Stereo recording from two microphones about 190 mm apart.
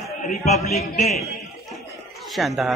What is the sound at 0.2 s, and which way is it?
Speech, 40° left (ahead or behind).